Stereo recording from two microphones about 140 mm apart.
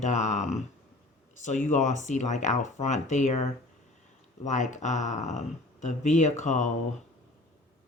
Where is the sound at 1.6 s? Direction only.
60° left (ahead or behind).